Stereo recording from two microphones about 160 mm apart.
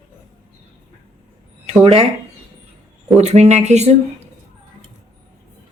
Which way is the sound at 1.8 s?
40° right (ahead or behind).